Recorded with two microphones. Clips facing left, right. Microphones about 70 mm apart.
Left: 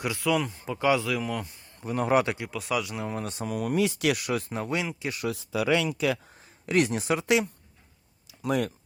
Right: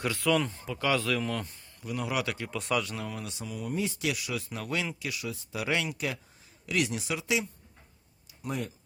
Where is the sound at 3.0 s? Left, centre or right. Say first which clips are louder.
Left 5 dB; left.